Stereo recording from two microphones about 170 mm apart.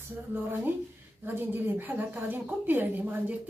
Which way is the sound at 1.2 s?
10° right (ahead or behind).